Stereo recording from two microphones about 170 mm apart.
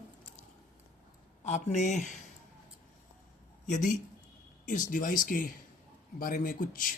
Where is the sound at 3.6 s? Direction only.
45° left (ahead or behind).